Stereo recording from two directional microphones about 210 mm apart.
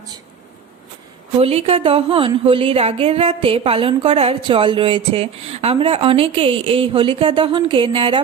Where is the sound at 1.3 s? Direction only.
30° right (ahead or behind).